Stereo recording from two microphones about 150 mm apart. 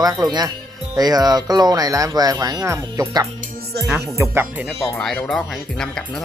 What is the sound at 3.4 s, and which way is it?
Music, 90° right.